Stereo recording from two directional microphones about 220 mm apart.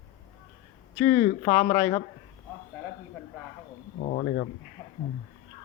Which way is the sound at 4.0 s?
40° left (ahead or behind).